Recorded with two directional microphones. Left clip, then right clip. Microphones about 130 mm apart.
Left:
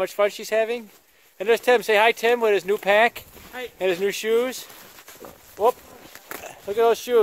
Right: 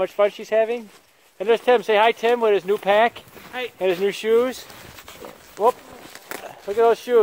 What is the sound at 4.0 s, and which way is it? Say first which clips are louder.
Speech: right 4 dB; 10° left (ahead or behind).